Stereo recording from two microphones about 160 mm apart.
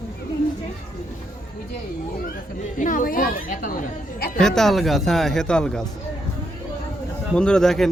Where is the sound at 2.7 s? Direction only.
55° left (ahead or behind).